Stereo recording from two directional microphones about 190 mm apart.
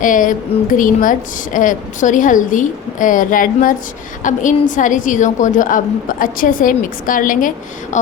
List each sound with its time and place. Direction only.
0.0 s a woman's voice: 45° left (ahead or behind)